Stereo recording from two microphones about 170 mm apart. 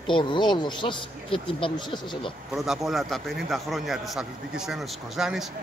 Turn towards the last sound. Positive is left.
turn(degrees=0)  # may be behind; listen again after turning